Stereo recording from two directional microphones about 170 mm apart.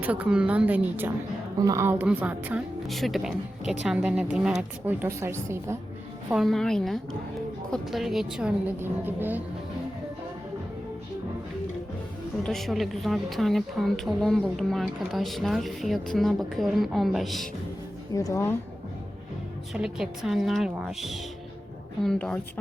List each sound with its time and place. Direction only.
0.0 s a woman's voice: 10° right (ahead or behind)
6.3 s a woman's voice: centre (ahead or behind)
12.4 s a woman's voice: centre (ahead or behind)
18.1 s a woman's voice: 20° left (ahead or behind)
19.7 s a woman's voice: 5° right (ahead or behind)